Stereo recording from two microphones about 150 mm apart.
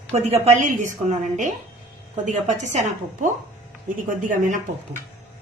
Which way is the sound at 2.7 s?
55° right (ahead or behind).